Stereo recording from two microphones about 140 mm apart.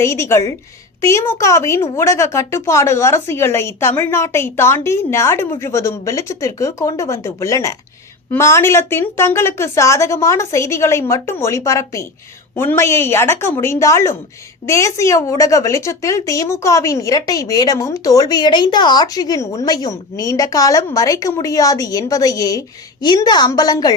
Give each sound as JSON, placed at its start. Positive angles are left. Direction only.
{"t": 0.0, "sound": "a woman's voice", "side_deg": 20}